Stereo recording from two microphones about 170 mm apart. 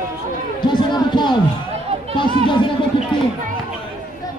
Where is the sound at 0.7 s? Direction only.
25° left (ahead or behind).